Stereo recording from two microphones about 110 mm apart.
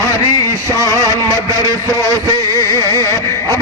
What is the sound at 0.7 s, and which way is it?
Music, 30° right (ahead or behind).